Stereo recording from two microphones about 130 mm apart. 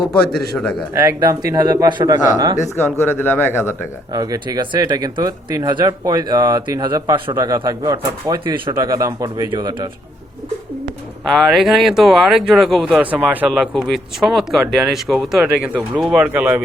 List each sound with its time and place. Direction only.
0.3 s speech: 5° left (ahead or behind)
0.9 s speech: 25° right (ahead or behind)
3.0 s speech: 15° left (ahead or behind)
4.1 s speech: 30° right (ahead or behind)
8.7 s speech: 25° right (ahead or behind)
11.3 s speech: centre (ahead or behind)
13.5 s speech: centre (ahead or behind)